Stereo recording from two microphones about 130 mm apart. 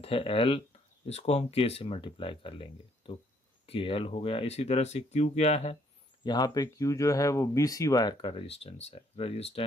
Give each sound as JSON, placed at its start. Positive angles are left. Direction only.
{"t": 0.0, "sound": "speech", "side_deg": 45}
{"t": 6.2, "sound": "speech", "side_deg": 30}
{"t": 8.3, "sound": "speech", "side_deg": 50}